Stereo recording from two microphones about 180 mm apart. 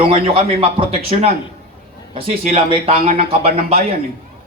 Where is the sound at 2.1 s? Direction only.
35° right (ahead or behind).